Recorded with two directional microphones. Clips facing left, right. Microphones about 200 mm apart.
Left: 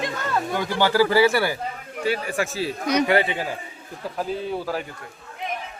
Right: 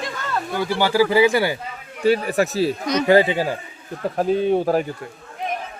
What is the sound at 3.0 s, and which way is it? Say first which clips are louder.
Speech: right 6 dB; 25° right (ahead or behind).